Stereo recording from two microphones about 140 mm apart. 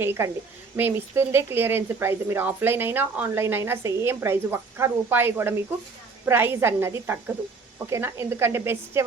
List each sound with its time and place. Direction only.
0.0 s speech: 15° right (ahead or behind)